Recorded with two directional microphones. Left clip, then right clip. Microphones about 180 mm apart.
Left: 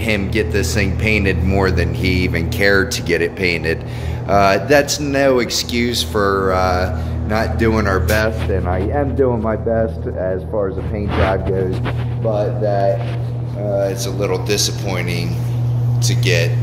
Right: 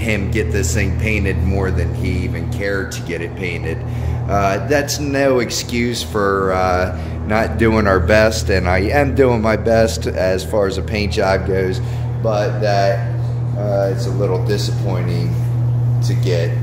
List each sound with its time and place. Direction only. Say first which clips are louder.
0.0 s speech: left 2 dB; 10° left (ahead or behind)
1.0 s speech: left 5 dB; 20° left (ahead or behind); by 3.7 s 35° left (ahead or behind)
4.3 s speech: left 4 dB; 20° left (ahead or behind)
4.8 s speech: left 1 dB; 5° left (ahead or behind); by 8.2 s 20° right (ahead or behind)
8.2 s speech: right 4 dB; 40° right (ahead or behind); by 11.6 s 80° right
12.3 s speech: right 1 dB; 10° right (ahead or behind)
14.2 s speech: left 2 dB; 10° right (ahead or behind)
16.0 s speech: left 3 dB; 10° right (ahead or behind)